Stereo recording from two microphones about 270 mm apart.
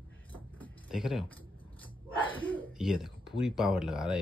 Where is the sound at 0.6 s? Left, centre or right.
Centre.